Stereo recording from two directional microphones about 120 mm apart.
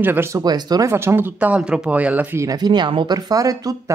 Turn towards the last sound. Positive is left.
turn(degrees=-30)  # may be behind; listen again after turning